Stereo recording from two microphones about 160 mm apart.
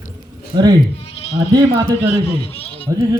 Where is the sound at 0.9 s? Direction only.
40° left (ahead or behind).